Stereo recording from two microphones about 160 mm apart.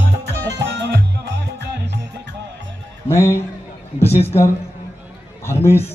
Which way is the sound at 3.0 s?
15° left (ahead or behind).